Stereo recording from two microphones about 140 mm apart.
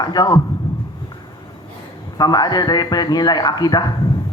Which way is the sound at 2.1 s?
30° left (ahead or behind).